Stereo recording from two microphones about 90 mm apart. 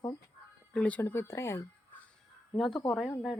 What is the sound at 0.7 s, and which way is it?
Speech, 15° left (ahead or behind).